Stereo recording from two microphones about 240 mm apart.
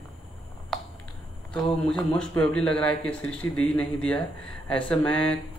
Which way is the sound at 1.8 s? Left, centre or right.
Centre.